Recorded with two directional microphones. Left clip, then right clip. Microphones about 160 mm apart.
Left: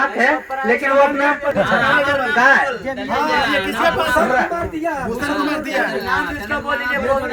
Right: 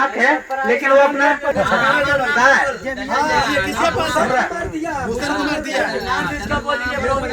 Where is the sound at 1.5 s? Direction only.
15° left (ahead or behind).